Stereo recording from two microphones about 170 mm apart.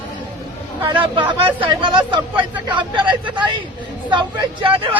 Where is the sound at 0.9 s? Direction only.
30° right (ahead or behind).